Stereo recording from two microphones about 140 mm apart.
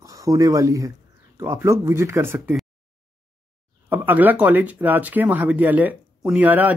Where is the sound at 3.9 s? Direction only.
15° right (ahead or behind).